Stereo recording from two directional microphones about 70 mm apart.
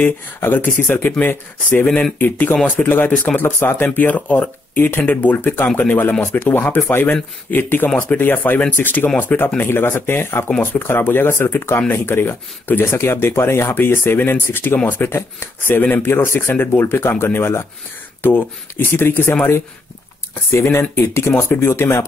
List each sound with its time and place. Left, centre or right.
0.4 s speech: left
20.6 s speech: left